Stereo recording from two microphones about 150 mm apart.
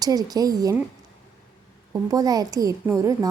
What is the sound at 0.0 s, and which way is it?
Speech, 25° right (ahead or behind).